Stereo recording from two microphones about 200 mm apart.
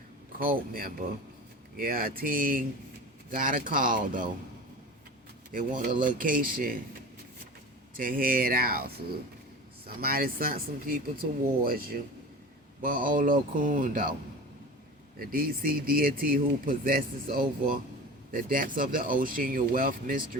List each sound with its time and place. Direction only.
0.3 s speech: 45° right (ahead or behind)
5.5 s speech: 40° right (ahead or behind)
7.9 s speech: 45° right (ahead or behind)
15.2 s speech: 45° right (ahead or behind)